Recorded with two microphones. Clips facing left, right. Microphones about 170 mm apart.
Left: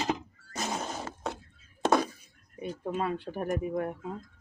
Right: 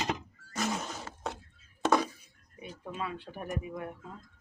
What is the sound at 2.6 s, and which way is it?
Speech, 45° left (ahead or behind).